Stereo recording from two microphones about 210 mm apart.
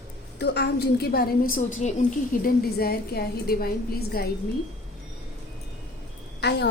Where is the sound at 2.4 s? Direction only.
45° left (ahead or behind).